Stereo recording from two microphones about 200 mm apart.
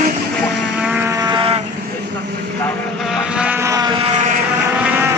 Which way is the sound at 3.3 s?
10° right (ahead or behind).